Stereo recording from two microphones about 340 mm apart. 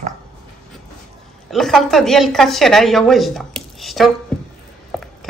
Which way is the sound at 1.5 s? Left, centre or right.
Centre.